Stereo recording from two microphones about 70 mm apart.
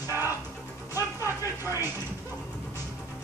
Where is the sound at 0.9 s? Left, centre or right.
Right.